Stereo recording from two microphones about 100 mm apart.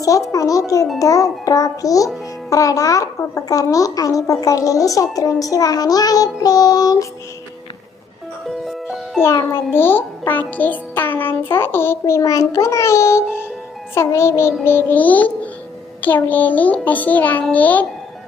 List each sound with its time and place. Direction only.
0.3 s a child's voice: 35° left (ahead or behind)
8.4 s music: centre (ahead or behind)
9.3 s a child's voice: 35° left (ahead or behind)
9.7 s music: 20° left (ahead or behind)
14.6 s a child's voice: 20° left (ahead or behind)